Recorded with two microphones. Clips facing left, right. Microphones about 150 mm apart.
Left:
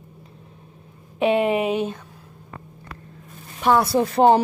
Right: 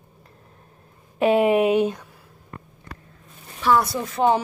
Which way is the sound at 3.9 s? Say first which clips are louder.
Left 8 dB; 40° left (ahead or behind).